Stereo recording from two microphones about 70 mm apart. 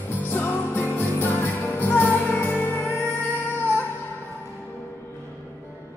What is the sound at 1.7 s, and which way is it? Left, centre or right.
Music, left.